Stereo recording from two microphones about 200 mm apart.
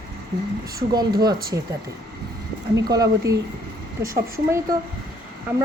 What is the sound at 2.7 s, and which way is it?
Speech, 15° right (ahead or behind).